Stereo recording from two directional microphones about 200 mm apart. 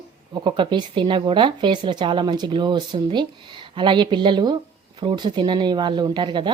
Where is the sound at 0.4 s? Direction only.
25° right (ahead or behind).